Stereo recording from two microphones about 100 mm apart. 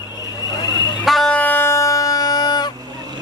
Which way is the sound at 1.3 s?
20° left (ahead or behind).